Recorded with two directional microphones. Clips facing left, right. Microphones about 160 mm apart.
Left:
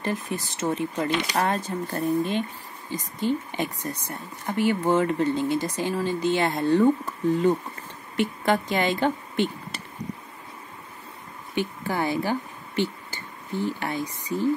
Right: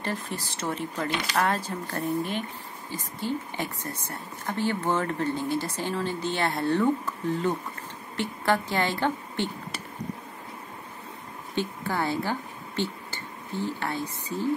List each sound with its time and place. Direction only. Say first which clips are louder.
0.0 s a woman's voice: left 4 dB; 15° left (ahead or behind)
11.6 s a woman's voice: left 2 dB; 10° left (ahead or behind)